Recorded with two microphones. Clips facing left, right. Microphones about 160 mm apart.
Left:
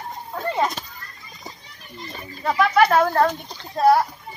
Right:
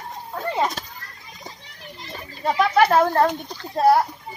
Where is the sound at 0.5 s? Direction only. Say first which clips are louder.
Even; 5° right (ahead or behind).